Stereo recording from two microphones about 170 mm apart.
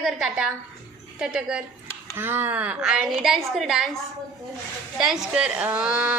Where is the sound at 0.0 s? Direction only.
5° right (ahead or behind).